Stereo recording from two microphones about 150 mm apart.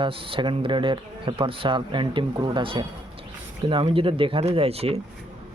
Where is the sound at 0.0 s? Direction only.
35° right (ahead or behind).